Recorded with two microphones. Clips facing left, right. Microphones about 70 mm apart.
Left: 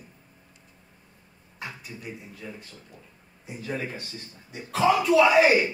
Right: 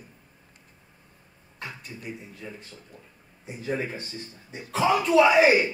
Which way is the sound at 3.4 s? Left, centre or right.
Right.